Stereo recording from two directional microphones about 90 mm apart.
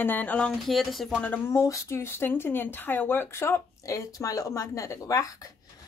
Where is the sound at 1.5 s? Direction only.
35° left (ahead or behind).